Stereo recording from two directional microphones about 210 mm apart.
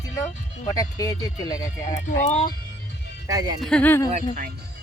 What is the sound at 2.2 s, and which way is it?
Speech, 35° left (ahead or behind).